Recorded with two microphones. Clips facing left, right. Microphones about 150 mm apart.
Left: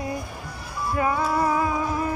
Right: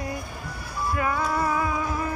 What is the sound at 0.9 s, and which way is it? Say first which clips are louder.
Music: left 3 dB; 25° left (ahead or behind).